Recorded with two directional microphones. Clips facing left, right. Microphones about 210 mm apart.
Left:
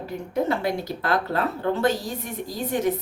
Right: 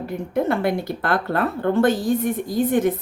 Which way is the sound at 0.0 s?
55° right (ahead or behind).